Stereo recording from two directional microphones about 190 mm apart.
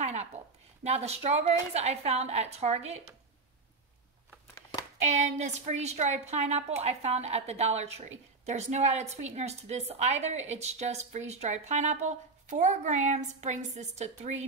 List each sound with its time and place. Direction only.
0.0 s a sound: 35° right (ahead or behind)
0.8 s a woman's voice: 35° right (ahead or behind)
5.0 s a woman's voice: 40° right (ahead or behind)